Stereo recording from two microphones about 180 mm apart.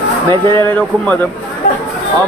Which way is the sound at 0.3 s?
25° right (ahead or behind).